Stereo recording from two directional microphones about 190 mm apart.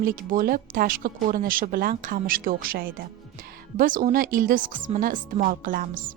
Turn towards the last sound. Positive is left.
turn(degrees=-45)  # may be behind; listen again after turning